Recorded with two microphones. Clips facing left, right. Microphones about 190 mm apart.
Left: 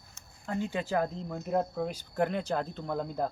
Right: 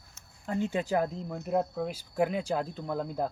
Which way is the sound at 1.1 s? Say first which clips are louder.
Right 1 dB; 5° right (ahead or behind).